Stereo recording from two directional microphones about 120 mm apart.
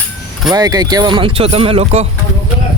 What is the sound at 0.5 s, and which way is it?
A man's voice, 35° right (ahead or behind).